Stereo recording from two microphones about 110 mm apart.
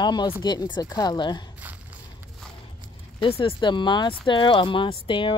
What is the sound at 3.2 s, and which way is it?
Speech, 55° left (ahead or behind).